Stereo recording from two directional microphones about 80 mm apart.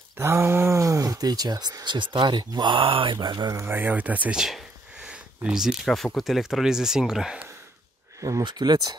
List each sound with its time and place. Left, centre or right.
0.2 s speech: right
3.6 s speech: right
4.4 s a sound: centre
5.1 s speech: centre
8.2 s speech: right
8.5 s speech: right